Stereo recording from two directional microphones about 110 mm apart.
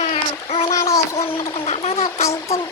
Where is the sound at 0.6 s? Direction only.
30° left (ahead or behind).